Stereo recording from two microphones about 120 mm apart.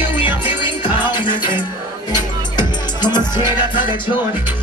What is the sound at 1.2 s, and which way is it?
Music, 40° left (ahead or behind).